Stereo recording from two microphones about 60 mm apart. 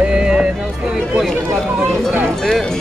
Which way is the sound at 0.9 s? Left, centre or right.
Centre.